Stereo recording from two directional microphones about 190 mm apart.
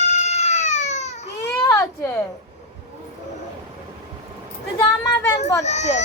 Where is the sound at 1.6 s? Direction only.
15° left (ahead or behind).